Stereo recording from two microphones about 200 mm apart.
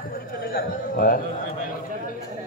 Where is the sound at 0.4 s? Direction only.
45° left (ahead or behind).